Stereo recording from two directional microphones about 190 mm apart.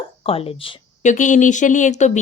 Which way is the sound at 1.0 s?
40° left (ahead or behind).